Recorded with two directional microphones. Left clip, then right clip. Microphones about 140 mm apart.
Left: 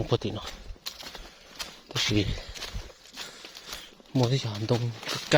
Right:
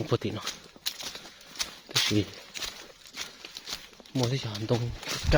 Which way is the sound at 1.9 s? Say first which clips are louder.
Right 2 dB; 10° left (ahead or behind).